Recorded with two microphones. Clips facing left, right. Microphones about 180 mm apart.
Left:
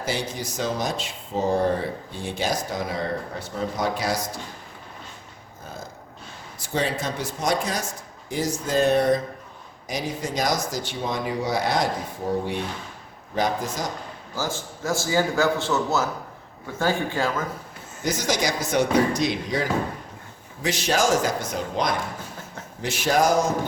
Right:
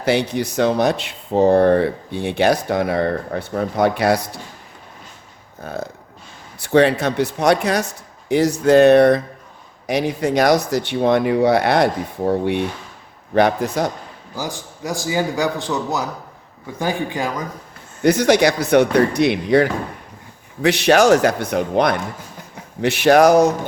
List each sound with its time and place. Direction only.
0.0 s speech: 65° right (ahead or behind)
5.6 s speech: 65° right (ahead or behind)
13.3 s speech: 65° right (ahead or behind)
14.3 s a man's voice: 15° right (ahead or behind)
18.0 s speech: 65° right (ahead or behind)